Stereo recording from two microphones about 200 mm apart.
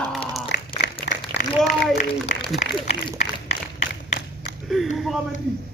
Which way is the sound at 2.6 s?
30° left (ahead or behind).